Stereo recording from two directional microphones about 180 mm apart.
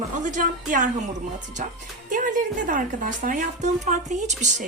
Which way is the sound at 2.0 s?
45° right (ahead or behind).